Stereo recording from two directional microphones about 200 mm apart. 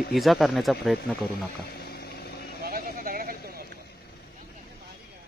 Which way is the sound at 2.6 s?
45° right (ahead or behind).